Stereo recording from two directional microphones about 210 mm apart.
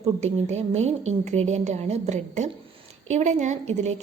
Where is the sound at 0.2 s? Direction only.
30° right (ahead or behind).